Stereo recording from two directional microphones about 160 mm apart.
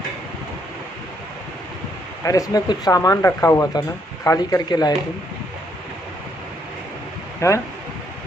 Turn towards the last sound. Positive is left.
turn(degrees=20)  # may be behind; listen again after turning